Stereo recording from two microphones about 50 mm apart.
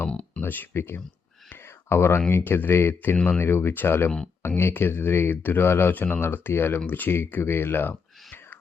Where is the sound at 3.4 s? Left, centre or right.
Left.